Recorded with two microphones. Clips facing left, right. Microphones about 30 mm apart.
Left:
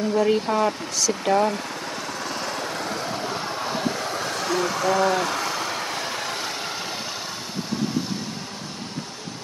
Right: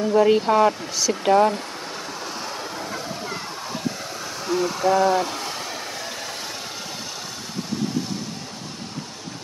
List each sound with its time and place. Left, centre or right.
0.1 s speech: centre
3.3 s vehicle: left